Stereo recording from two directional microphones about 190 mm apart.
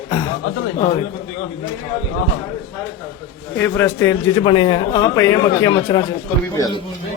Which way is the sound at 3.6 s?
10° left (ahead or behind).